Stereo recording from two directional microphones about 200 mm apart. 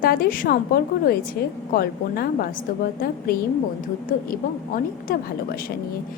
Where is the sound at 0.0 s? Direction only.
45° left (ahead or behind).